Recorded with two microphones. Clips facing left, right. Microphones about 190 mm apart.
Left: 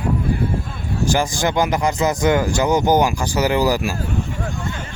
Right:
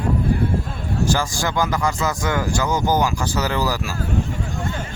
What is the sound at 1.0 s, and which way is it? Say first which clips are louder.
Speech: left 4 dB; 15° left (ahead or behind).